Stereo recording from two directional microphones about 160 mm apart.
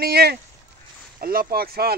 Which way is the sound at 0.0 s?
80° right.